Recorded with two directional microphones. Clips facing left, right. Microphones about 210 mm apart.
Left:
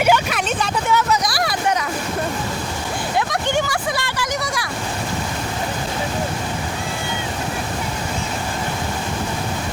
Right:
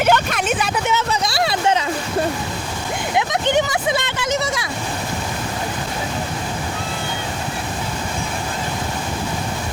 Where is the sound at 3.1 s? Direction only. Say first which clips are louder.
Right 3 dB; 20° right (ahead or behind).